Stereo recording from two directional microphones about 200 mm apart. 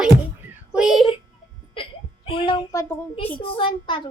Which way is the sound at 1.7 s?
25° left (ahead or behind).